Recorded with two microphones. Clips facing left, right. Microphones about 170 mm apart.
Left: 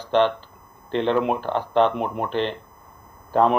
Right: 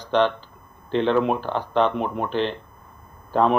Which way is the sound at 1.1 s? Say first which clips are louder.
Even; 15° left (ahead or behind).